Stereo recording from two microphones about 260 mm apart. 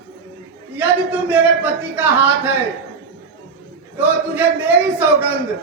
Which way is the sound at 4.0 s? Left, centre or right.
Centre.